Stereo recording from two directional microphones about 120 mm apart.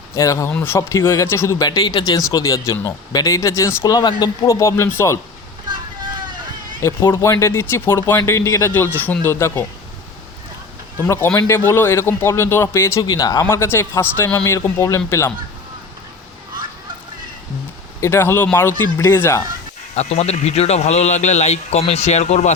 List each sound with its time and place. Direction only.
0.2 s speech: 25° left (ahead or behind)
6.8 s speech: 25° left (ahead or behind)
11.0 s speech: 20° left (ahead or behind)
13.5 s speech: 20° left (ahead or behind)
18.0 s speech: 20° left (ahead or behind)
20.0 s speech: 65° left (ahead or behind)